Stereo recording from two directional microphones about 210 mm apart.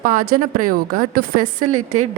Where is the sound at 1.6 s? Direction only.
90° right.